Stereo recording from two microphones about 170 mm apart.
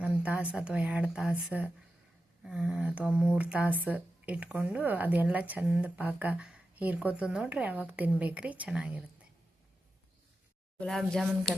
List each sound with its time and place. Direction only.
0.0 s speech: 10° right (ahead or behind)
10.8 s speech: 5° left (ahead or behind)